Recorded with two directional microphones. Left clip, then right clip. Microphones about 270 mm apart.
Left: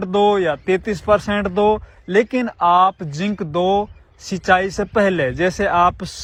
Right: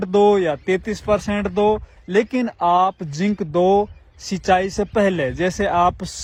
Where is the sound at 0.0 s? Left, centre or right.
Centre.